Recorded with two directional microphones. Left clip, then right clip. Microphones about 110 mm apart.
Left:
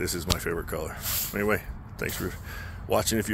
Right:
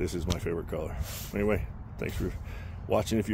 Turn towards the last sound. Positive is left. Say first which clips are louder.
# left 2 dB
turn(degrees=-15)  # may be behind; listen again after turning